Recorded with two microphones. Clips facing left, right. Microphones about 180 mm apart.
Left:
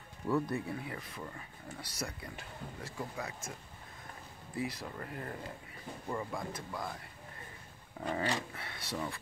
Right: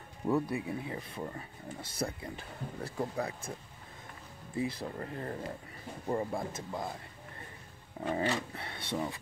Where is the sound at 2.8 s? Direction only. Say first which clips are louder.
Right 7 dB; 35° right (ahead or behind).